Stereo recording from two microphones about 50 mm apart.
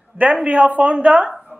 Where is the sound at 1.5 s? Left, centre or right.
Left.